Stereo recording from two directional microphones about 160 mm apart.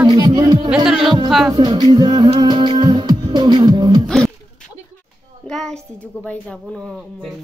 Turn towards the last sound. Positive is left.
turn(degrees=0)  # may be behind; listen again after turning